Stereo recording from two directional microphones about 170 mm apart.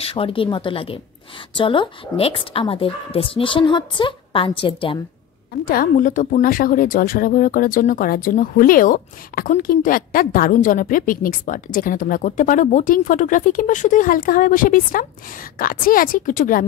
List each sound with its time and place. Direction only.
0.0 s a woman's voice: 35° left (ahead or behind)
5.7 s a woman's voice: 55° left (ahead or behind)